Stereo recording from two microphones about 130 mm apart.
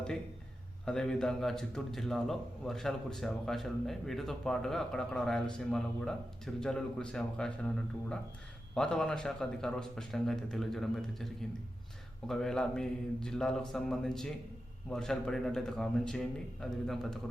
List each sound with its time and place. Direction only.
0.9 s a man's voice: 5° left (ahead or behind)
8.7 s a man's voice: 5° left (ahead or behind)